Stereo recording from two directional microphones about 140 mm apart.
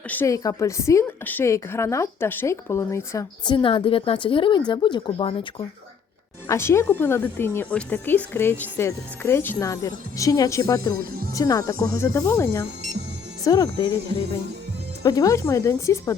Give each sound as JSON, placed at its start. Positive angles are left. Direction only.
{"t": 0.1, "sound": "speech", "side_deg": 15}
{"t": 0.3, "sound": "a woman's voice", "side_deg": 25}
{"t": 3.4, "sound": "a woman's voice", "side_deg": 35}
{"t": 6.5, "sound": "a woman's voice", "side_deg": 20}
{"t": 15.0, "sound": "a woman's voice", "side_deg": 25}